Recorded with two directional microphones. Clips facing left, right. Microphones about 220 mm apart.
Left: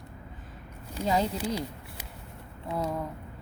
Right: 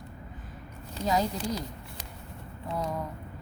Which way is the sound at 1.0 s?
10° left (ahead or behind).